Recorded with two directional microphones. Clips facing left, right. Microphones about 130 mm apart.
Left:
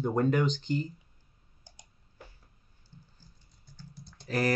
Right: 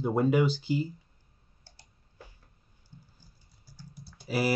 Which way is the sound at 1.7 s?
15° left (ahead or behind).